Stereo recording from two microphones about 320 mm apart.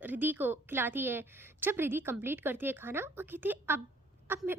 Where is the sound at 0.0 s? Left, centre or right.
Centre.